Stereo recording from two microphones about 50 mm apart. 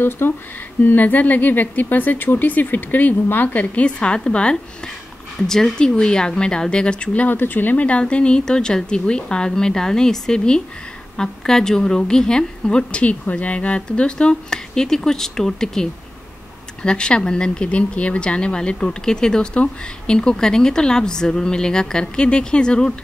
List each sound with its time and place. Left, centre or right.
0.2 s speech: left
0.8 s speech: left
5.5 s speech: centre
7.2 s speech: left
7.8 s speech: left